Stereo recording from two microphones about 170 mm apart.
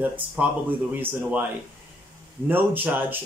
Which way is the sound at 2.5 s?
10° right (ahead or behind).